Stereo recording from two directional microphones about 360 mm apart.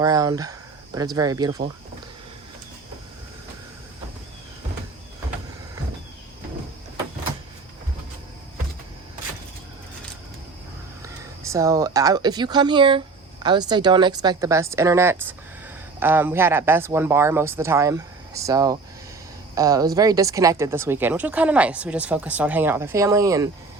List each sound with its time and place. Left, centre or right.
0.0 s speech: centre
11.0 s speech: centre